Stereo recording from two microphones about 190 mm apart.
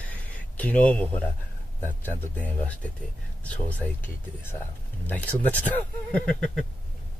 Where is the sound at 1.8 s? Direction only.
10° left (ahead or behind).